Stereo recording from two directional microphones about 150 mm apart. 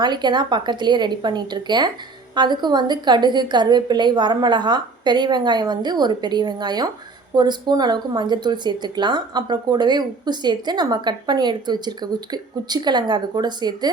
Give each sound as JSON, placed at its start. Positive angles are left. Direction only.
{"t": 0.0, "sound": "speech", "side_deg": -30}